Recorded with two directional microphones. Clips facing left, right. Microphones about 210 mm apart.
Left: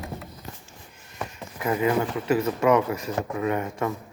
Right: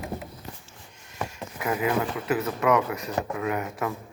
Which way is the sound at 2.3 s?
Centre (ahead or behind).